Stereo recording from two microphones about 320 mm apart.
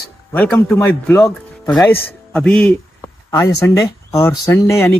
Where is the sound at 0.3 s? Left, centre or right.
Centre.